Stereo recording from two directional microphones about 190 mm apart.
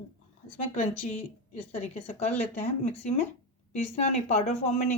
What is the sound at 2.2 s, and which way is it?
Speech, 35° left (ahead or behind).